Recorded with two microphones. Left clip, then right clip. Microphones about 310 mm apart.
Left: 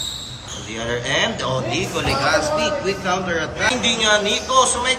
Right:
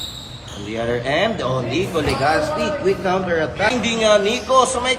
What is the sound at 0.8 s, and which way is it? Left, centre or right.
A man's voice, centre.